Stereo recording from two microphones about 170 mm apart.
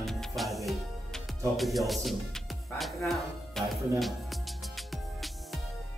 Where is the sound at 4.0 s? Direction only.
Centre (ahead or behind).